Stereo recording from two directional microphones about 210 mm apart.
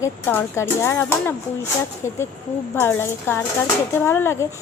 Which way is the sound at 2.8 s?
10° left (ahead or behind).